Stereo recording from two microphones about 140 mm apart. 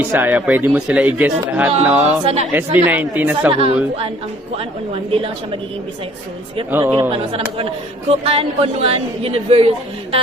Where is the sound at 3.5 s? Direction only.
45° right (ahead or behind).